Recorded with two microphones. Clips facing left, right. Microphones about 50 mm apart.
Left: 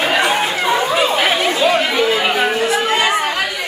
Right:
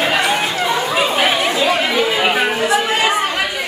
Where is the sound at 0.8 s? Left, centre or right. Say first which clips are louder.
Left 1 dB; centre.